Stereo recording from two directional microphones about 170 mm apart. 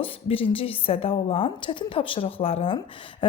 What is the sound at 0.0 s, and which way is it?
A woman's voice, 35° left (ahead or behind).